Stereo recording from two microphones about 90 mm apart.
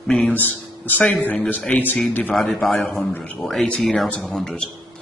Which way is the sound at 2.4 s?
Centre (ahead or behind).